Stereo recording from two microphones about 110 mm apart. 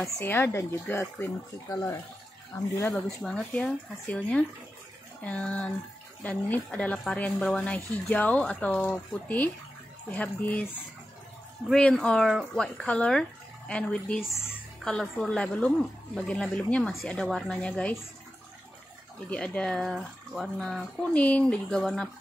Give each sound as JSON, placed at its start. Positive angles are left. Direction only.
{"t": 0.0, "sound": "speech", "side_deg": 20}
{"t": 1.7, "sound": "speech", "side_deg": 30}
{"t": 3.2, "sound": "speech", "side_deg": 5}
{"t": 11.7, "sound": "speech", "side_deg": 10}
{"t": 19.3, "sound": "speech", "side_deg": 10}